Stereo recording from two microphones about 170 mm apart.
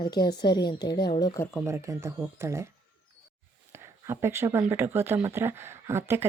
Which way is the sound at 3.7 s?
15° right (ahead or behind).